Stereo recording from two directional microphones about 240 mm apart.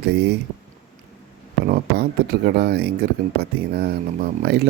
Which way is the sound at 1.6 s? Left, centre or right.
Right.